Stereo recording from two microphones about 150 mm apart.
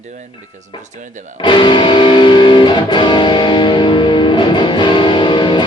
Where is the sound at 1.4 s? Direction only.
30° left (ahead or behind).